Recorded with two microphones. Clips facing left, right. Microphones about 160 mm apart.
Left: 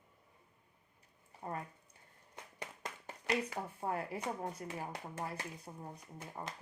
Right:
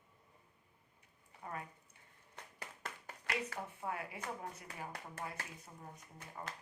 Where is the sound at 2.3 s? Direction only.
15° left (ahead or behind).